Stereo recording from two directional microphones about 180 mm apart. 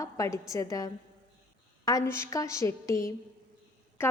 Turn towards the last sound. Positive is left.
turn(degrees=10)  # may be behind; listen again after turning